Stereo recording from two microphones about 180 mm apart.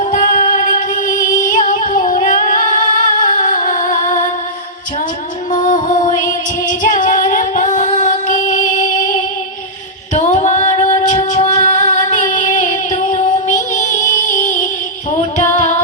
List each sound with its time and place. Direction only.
0.0 s music: 50° left (ahead or behind)
5.6 s music: 45° left (ahead or behind)
6.7 s female singing: 45° left (ahead or behind)
8.8 s music: 45° left (ahead or behind)
15.4 s music: 45° left (ahead or behind)